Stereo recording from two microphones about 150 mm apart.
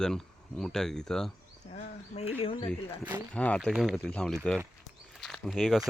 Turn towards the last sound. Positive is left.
turn(degrees=0)  # may be behind; listen again after turning